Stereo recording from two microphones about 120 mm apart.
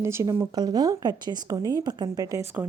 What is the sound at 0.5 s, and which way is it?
A woman's voice, 35° right (ahead or behind).